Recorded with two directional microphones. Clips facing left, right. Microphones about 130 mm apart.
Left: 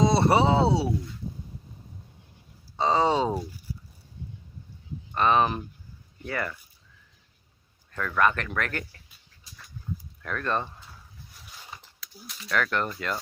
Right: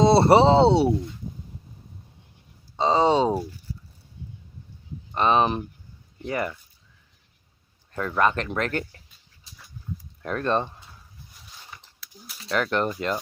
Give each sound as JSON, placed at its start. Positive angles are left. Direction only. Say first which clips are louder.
{"t": 0.0, "sound": "speech", "louder": "right 5 dB", "side_deg": -30}
{"t": 2.7, "sound": "speech", "louder": "right 3 dB", "side_deg": -20}
{"t": 5.1, "sound": "speech", "louder": "right 2 dB", "side_deg": -20}
{"t": 7.9, "sound": "speech", "louder": "right 2 dB", "side_deg": -25}
{"t": 10.2, "sound": "speech", "louder": "right 5 dB", "side_deg": -25}
{"t": 12.0, "sound": "a sound", "louder": "left 1 dB", "side_deg": -5}
{"t": 12.4, "sound": "speech", "louder": "right 3 dB", "side_deg": -25}